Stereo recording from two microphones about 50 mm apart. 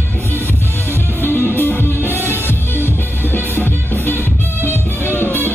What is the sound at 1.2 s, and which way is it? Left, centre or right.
Music, left.